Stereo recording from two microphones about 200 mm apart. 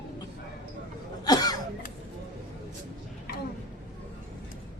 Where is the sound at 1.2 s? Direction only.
20° left (ahead or behind).